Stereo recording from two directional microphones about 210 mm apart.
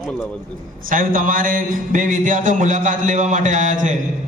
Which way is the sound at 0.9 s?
40° right (ahead or behind).